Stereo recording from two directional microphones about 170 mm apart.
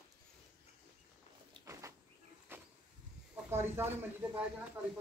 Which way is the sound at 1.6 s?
15° right (ahead or behind).